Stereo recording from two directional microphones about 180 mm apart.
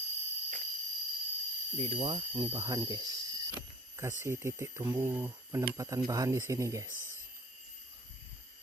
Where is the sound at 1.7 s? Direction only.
35° right (ahead or behind); by 6.8 s 20° right (ahead or behind).